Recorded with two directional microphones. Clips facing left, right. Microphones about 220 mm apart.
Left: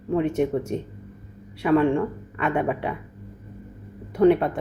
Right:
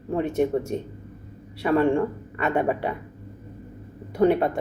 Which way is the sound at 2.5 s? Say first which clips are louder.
Right 2 dB; 40° right (ahead or behind).